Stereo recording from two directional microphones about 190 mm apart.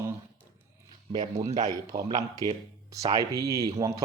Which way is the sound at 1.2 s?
35° right (ahead or behind).